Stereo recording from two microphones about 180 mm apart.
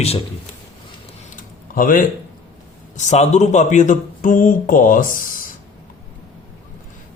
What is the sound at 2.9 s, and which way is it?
A man's voice, 40° left (ahead or behind).